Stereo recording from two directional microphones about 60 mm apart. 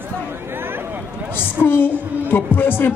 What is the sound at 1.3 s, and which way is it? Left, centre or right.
A man's voice, left.